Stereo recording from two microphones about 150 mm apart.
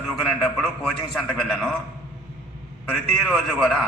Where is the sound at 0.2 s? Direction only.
5° left (ahead or behind).